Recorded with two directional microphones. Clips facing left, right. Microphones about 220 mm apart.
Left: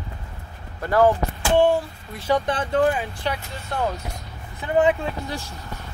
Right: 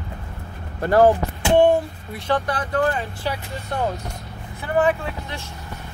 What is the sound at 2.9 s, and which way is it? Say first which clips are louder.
Speech: even; centre (ahead or behind).